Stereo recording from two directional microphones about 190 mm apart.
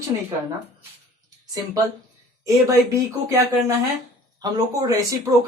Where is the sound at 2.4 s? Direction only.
15° right (ahead or behind).